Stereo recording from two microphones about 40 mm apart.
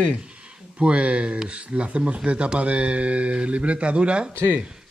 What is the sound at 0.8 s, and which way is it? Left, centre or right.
Speech, right.